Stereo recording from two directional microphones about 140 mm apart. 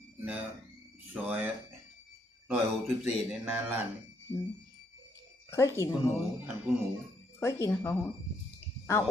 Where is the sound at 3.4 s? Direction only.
10° right (ahead or behind).